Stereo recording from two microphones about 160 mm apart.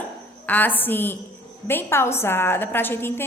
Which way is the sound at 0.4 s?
10° left (ahead or behind).